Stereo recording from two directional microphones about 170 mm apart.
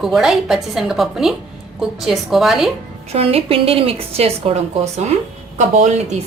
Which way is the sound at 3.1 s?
35° right (ahead or behind).